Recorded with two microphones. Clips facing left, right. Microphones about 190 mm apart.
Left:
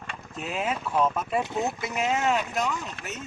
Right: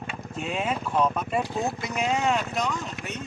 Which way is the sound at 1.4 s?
20° left (ahead or behind).